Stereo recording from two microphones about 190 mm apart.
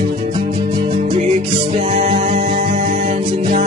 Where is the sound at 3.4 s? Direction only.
45° right (ahead or behind).